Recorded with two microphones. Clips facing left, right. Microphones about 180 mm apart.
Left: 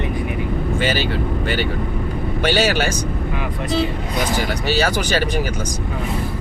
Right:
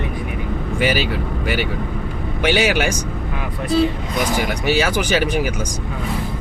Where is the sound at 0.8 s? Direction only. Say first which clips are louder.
Right 3 dB; 10° right (ahead or behind).